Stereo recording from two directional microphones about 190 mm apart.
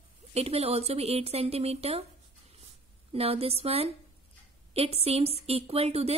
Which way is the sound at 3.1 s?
30° right (ahead or behind).